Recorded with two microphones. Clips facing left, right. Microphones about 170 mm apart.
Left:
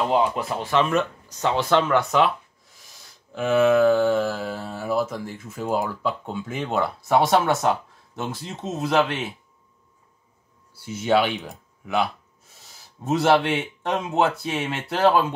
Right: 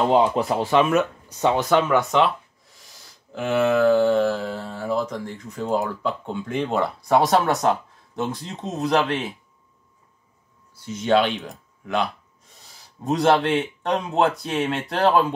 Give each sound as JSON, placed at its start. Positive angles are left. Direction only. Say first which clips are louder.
{"t": 0.1, "sound": "speech", "louder": "right 3 dB", "side_deg": -25}
{"t": 0.4, "sound": "speech", "louder": "right 5 dB", "side_deg": -40}
{"t": 0.8, "sound": "speech", "louder": "right 3 dB", "side_deg": -5}
{"t": 3.3, "sound": "speech", "louder": "left 2 dB", "side_deg": 0}
{"t": 10.7, "sound": "speech", "louder": "right 1 dB", "side_deg": 5}